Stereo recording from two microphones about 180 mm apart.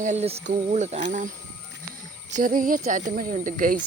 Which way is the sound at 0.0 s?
40° right (ahead or behind).